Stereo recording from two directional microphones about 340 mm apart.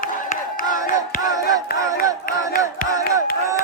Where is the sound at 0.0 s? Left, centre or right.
Left.